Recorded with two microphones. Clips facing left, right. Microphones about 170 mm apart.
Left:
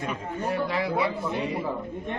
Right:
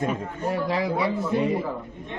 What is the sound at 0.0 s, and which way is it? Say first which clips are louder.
A man's voice: right 3 dB; 40° right (ahead or behind).